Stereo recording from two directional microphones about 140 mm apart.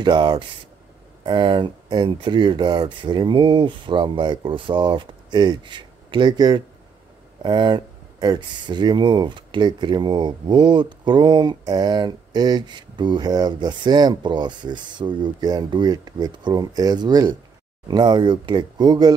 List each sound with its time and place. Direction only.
0.0 s speech: 30° right (ahead or behind)